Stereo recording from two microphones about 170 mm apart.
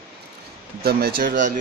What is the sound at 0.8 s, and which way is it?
Speech, 65° right (ahead or behind).